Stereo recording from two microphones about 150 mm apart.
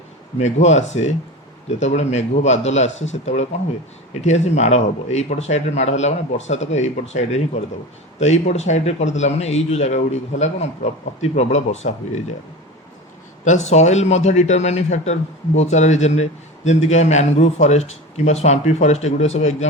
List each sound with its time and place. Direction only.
0.3 s a man's voice: 50° left (ahead or behind)
13.4 s a man's voice: 50° left (ahead or behind)